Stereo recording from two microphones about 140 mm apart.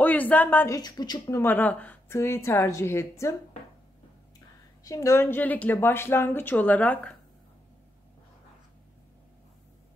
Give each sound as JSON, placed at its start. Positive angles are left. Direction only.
{"t": 0.0, "sound": "speech", "side_deg": 10}
{"t": 0.7, "sound": "a woman's voice", "side_deg": 30}
{"t": 1.4, "sound": "speech", "side_deg": 15}
{"t": 4.8, "sound": "speech", "side_deg": 25}